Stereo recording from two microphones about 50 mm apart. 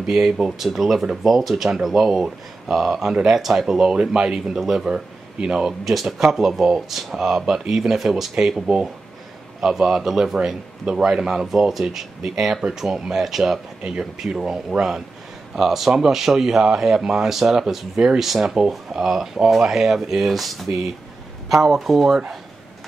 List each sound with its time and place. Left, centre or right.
0.0 s speech: centre
13.8 s speech: centre
18.2 s speech: centre